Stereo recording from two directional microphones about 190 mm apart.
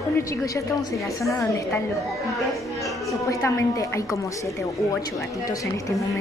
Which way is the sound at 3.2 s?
15° left (ahead or behind).